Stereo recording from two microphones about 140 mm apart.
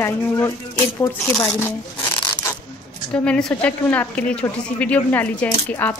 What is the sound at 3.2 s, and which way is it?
A woman's voice, 5° left (ahead or behind).